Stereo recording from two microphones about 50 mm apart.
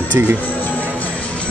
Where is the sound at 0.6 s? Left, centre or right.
Left.